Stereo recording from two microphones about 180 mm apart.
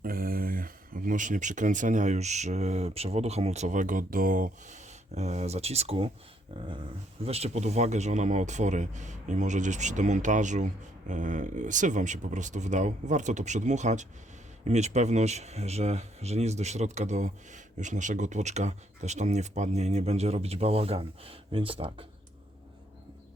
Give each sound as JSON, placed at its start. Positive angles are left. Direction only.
{"t": 0.0, "sound": "speech", "side_deg": -55}
{"t": 7.3, "sound": "speech", "side_deg": -35}